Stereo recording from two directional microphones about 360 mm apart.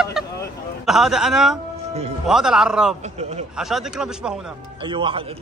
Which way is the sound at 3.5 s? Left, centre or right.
Centre.